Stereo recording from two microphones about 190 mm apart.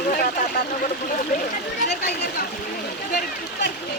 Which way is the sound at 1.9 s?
50° left (ahead or behind).